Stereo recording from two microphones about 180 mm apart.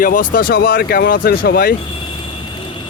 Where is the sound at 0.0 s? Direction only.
50° left (ahead or behind).